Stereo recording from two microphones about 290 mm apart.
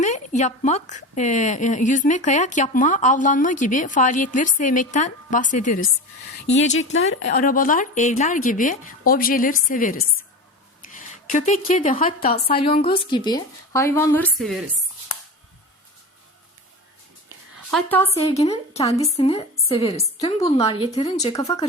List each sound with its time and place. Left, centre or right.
0.0 s a woman's voice: left
6.3 s speech: left
7.2 s a woman's voice: left
10.9 s a sound: left
11.8 s a woman's voice: left
12.5 s a woman's voice: centre
17.7 s a woman's voice: centre
18.1 s a woman's voice: left